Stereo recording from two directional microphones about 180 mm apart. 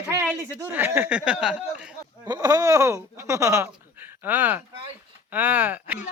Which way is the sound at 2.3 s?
20° right (ahead or behind).